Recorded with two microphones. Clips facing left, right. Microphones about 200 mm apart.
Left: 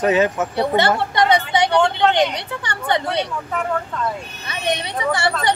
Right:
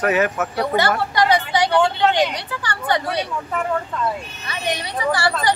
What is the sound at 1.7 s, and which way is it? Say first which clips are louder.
Speech: even; 5° right (ahead or behind).